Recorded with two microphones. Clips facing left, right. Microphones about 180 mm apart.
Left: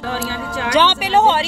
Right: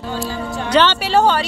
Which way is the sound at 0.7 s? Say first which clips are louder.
Right 1 dB; 10° left (ahead or behind).